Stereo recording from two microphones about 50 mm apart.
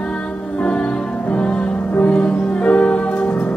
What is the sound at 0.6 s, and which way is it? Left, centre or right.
Music, left.